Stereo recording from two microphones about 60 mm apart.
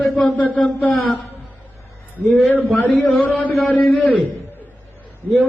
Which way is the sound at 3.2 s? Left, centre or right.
Left.